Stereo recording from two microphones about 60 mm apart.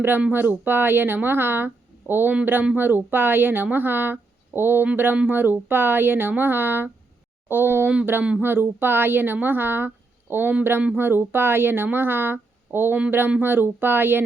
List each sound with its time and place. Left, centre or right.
0.3 s speech: right